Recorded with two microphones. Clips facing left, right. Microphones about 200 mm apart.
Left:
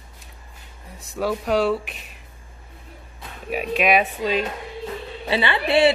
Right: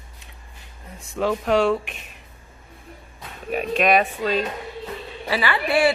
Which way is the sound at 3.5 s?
5° left (ahead or behind).